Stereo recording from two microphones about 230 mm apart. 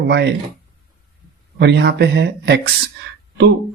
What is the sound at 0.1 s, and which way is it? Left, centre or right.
Speech, right.